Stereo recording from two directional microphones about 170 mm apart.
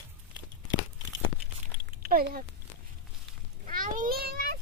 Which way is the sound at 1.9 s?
60° right (ahead or behind).